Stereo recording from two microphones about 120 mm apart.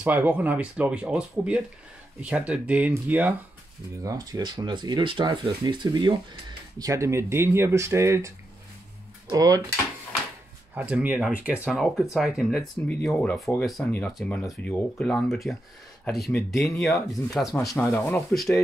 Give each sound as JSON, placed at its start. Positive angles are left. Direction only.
{"t": 0.0, "sound": "speech", "side_deg": -15}
{"t": 4.0, "sound": "speech", "side_deg": -30}
{"t": 6.8, "sound": "speech", "side_deg": -25}
{"t": 9.3, "sound": "speech", "side_deg": -30}
{"t": 10.7, "sound": "speech", "side_deg": -15}
{"t": 17.7, "sound": "speech", "side_deg": 15}